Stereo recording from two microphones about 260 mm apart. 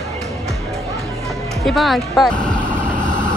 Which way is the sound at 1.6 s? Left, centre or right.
Centre.